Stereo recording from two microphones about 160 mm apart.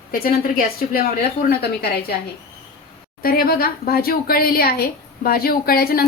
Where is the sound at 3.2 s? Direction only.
65° left (ahead or behind).